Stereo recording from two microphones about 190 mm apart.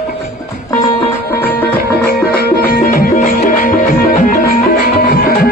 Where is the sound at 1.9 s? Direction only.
55° left (ahead or behind).